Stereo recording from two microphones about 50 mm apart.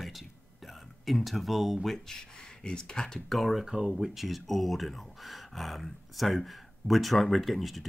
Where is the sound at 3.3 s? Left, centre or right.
Centre.